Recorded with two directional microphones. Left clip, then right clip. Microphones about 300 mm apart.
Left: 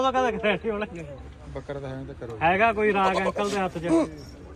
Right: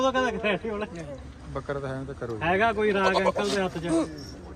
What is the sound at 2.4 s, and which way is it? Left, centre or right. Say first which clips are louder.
Speech: left 3 dB; centre.